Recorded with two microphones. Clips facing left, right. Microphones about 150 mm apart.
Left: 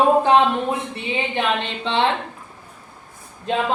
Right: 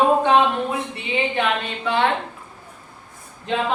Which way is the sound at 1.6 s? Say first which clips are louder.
Even; 25° left (ahead or behind).